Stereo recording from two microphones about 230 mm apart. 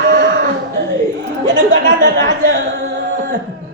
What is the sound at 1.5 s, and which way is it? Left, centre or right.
Speech, right.